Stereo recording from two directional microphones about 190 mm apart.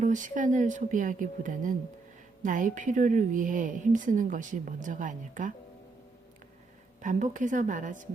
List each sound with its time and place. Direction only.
0.0 s a woman's voice: 40° right (ahead or behind)
7.0 s a woman's voice: 40° right (ahead or behind)